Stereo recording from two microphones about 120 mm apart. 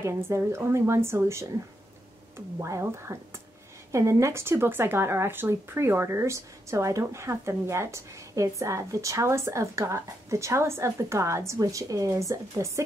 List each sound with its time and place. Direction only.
0.0 s speech: 25° right (ahead or behind)